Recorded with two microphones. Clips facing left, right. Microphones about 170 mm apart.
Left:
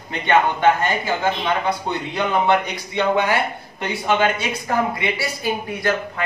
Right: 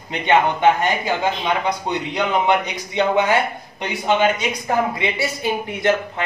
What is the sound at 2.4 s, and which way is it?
Speech, 20° right (ahead or behind).